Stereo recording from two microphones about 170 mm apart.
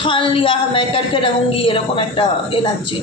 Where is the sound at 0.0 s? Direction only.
30° left (ahead or behind).